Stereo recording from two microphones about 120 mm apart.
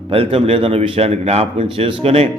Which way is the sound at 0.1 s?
55° right (ahead or behind).